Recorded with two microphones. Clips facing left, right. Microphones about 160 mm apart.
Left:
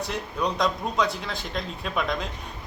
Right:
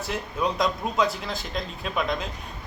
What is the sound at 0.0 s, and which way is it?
Speech, centre (ahead or behind).